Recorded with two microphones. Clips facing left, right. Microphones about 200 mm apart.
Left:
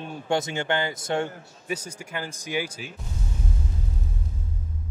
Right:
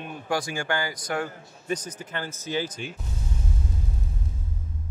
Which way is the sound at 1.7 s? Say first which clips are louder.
Right 1 dB; 10° left (ahead or behind).